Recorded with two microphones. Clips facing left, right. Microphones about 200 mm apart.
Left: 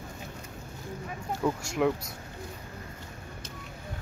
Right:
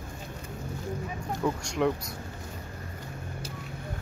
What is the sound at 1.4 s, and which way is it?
Speech, centre (ahead or behind).